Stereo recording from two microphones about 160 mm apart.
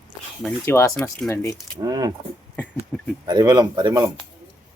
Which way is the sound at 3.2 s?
25° right (ahead or behind).